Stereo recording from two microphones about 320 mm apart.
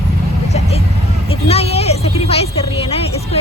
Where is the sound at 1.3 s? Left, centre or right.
Centre.